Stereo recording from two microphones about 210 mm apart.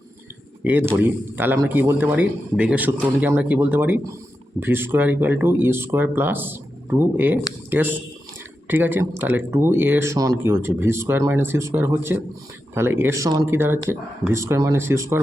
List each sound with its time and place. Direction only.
0.6 s speech: 10° right (ahead or behind)